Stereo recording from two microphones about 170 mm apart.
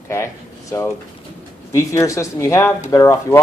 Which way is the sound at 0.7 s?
15° left (ahead or behind).